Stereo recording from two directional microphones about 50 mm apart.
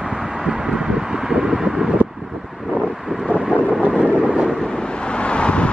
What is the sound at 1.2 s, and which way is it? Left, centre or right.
Vehicle, centre.